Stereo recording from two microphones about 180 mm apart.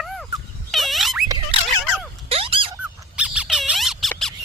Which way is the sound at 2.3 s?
30° right (ahead or behind).